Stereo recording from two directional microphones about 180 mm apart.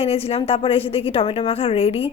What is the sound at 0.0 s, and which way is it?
A woman's voice, 35° left (ahead or behind).